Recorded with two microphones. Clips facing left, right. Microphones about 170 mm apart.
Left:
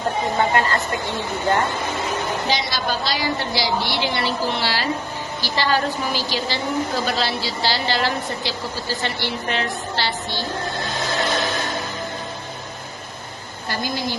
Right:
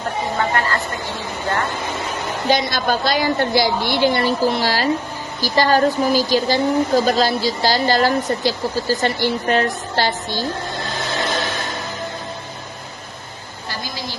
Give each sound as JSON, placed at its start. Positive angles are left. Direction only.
{"t": 0.6, "sound": "a woman's voice", "side_deg": 20}
{"t": 2.5, "sound": "a woman's voice", "side_deg": -50}
{"t": 13.7, "sound": "a sound", "side_deg": 55}